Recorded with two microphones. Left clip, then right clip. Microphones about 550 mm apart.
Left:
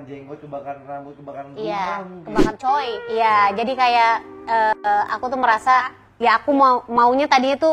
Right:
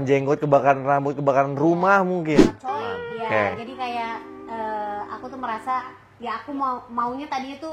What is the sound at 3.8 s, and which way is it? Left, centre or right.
A woman's voice, left.